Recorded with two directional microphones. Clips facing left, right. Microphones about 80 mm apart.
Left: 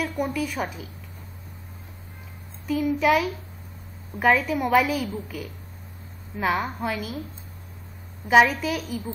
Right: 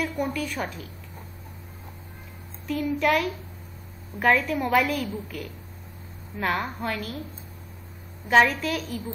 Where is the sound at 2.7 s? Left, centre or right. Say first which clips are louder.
Left 2 dB; centre.